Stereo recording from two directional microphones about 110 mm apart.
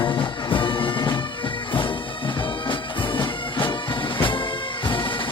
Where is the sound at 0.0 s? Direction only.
50° left (ahead or behind).